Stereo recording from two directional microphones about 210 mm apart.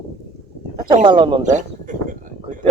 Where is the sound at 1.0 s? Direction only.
25° right (ahead or behind).